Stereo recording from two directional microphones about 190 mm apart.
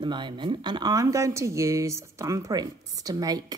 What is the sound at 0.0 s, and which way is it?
Speech, 25° right (ahead or behind).